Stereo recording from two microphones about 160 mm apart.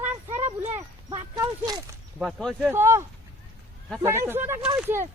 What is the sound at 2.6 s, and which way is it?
Speech, 15° right (ahead or behind).